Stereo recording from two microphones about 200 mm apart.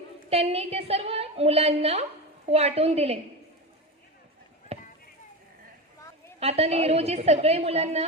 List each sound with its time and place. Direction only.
0.3 s a woman's voice: 30° right (ahead or behind)
4.7 s a sound: 30° right (ahead or behind)
6.4 s a woman's voice: 30° right (ahead or behind)